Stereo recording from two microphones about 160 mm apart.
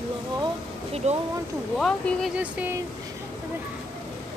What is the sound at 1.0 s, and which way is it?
Speech, 45° right (ahead or behind).